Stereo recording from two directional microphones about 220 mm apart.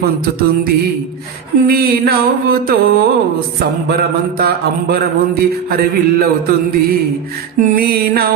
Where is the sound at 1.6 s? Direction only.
45° right (ahead or behind).